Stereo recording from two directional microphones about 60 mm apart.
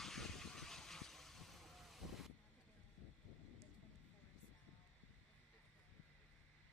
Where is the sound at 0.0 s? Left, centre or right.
Centre.